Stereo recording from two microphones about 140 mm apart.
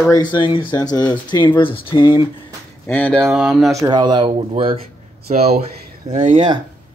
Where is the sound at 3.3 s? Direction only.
5° right (ahead or behind).